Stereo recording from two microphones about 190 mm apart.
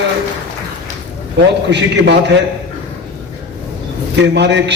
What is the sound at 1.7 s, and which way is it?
Speech, 65° right (ahead or behind).